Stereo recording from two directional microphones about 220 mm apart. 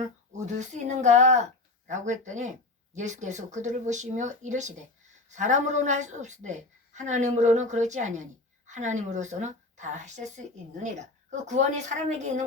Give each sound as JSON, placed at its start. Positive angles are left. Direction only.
{"t": 0.3, "sound": "a woman's voice", "side_deg": -35}
{"t": 11.4, "sound": "a woman's voice", "side_deg": -30}